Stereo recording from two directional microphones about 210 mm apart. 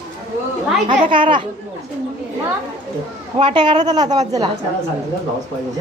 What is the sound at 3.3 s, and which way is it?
A woman's voice, 25° right (ahead or behind).